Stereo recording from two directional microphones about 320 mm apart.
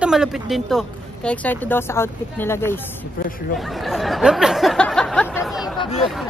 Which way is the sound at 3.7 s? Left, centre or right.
Centre.